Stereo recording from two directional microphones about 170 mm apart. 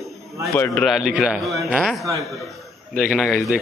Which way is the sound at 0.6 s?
5° left (ahead or behind).